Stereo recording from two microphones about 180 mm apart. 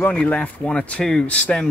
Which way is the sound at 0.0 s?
5° left (ahead or behind).